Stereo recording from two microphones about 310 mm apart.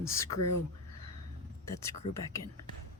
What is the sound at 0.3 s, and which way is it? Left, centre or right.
Speech, left.